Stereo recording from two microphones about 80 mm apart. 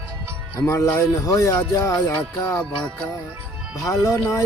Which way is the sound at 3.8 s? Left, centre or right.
Left.